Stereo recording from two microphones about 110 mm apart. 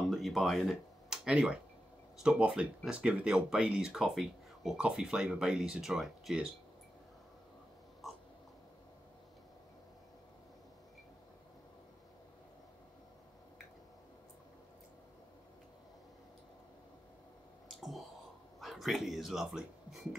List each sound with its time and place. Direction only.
0.1 s a sound: centre (ahead or behind)
2.2 s speech: 10° right (ahead or behind)
8.0 s crow: centre (ahead or behind)
17.6 s clicking: centre (ahead or behind)
18.6 s speech: centre (ahead or behind)